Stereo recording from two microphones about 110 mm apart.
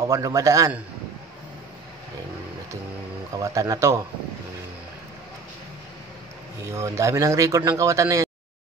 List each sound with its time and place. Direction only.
0.0 s speech: 30° right (ahead or behind)
3.3 s speech: 30° right (ahead or behind)
6.7 s speech: 25° right (ahead or behind)